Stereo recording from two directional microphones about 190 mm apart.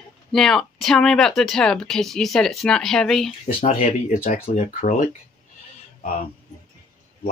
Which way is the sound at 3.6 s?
30° left (ahead or behind).